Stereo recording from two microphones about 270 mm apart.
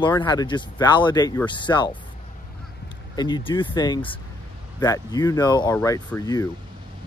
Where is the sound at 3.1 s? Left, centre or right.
Centre.